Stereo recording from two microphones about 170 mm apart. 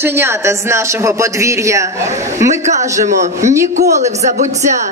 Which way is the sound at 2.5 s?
45° right (ahead or behind).